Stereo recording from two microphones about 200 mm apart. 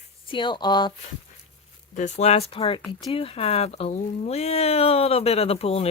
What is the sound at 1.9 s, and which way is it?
Speech, 35° left (ahead or behind).